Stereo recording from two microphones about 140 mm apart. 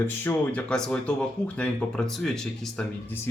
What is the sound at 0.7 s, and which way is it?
Speech, 5° left (ahead or behind).